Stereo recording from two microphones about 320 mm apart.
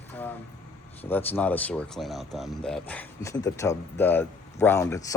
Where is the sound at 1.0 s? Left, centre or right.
Centre.